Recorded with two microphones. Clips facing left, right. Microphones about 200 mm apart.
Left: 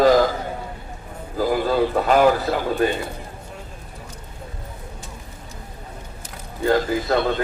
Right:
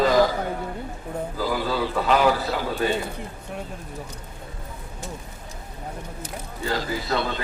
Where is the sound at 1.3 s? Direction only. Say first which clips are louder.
Left 7 dB; 50° left (ahead or behind).